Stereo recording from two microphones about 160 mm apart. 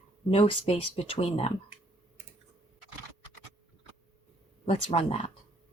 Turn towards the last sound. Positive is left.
turn(degrees=40)  # may be behind; listen again after turning